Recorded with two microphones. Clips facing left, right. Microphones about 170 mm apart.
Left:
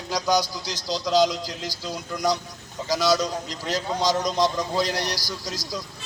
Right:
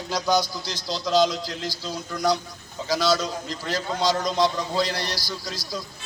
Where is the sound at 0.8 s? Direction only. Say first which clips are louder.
Left 3 dB; 40° left (ahead or behind).